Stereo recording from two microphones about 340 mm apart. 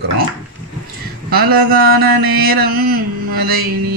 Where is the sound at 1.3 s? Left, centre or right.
Right.